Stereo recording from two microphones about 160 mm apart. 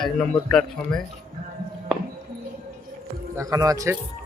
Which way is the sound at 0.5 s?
Centre (ahead or behind).